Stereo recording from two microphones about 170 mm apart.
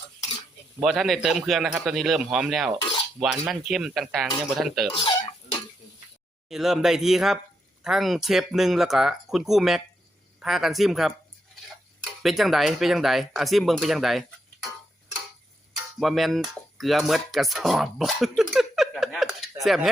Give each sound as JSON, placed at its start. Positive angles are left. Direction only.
{"t": 0.8, "sound": "a man's voice", "side_deg": 0}
{"t": 4.9, "sound": "a sound", "side_deg": 30}
{"t": 6.5, "sound": "a man's voice", "side_deg": 0}
{"t": 16.0, "sound": "a man's voice", "side_deg": 0}